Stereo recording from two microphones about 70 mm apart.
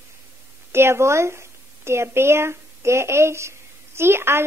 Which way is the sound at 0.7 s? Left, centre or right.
Right.